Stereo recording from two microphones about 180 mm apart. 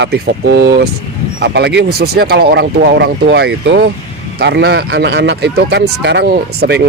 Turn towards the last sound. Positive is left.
turn(degrees=-65)  # may be behind; listen again after turning